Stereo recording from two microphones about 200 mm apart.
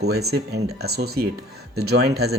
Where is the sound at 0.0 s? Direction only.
55° right (ahead or behind).